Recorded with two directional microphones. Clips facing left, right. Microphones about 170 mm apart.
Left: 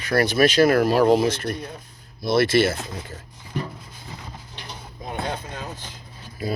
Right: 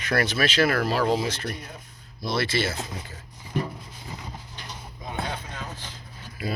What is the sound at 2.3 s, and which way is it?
Speech, 50° left (ahead or behind).